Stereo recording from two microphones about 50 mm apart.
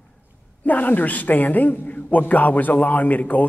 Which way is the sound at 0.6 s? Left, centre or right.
Left.